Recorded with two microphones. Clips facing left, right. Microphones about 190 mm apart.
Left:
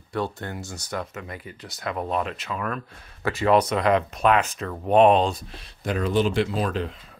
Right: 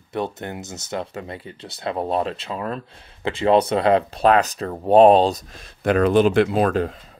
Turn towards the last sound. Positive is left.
turn(degrees=-50)  # may be behind; listen again after turning